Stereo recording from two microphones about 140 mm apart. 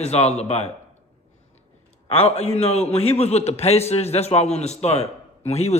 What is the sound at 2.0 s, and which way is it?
A man's voice, 45° left (ahead or behind).